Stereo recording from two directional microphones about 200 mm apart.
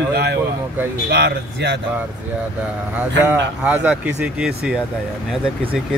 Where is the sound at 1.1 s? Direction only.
55° right (ahead or behind).